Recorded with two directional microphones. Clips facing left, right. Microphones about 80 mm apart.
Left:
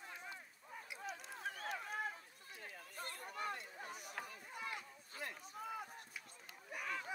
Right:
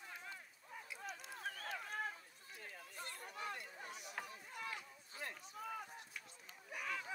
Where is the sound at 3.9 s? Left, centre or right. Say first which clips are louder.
Left 1 dB; left.